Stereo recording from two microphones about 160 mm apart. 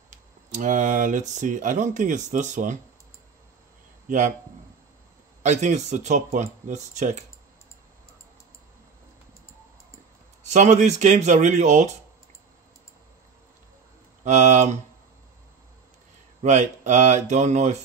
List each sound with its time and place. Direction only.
0.5 s speech: 55° right (ahead or behind)
5.4 s speech: 45° right (ahead or behind)
10.5 s speech: 50° right (ahead or behind)
14.2 s speech: 45° right (ahead or behind)
16.4 s speech: 45° right (ahead or behind)